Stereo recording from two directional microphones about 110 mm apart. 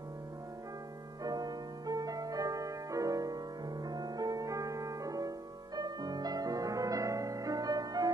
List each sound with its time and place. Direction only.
1.2 s music: 35° right (ahead or behind)